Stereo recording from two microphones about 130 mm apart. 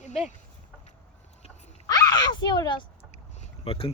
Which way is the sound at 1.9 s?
30° left (ahead or behind).